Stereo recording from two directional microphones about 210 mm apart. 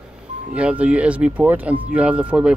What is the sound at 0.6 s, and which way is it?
Speech, 5° right (ahead or behind).